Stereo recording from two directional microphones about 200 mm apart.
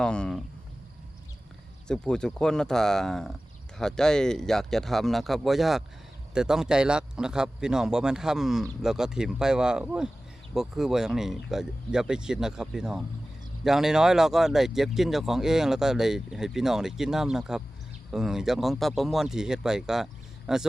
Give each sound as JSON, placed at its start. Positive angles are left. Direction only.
{"t": 0.0, "sound": "speech", "side_deg": 5}
{"t": 1.9, "sound": "speech", "side_deg": 5}